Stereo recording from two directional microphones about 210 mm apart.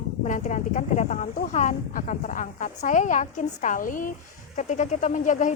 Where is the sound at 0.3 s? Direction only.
35° left (ahead or behind).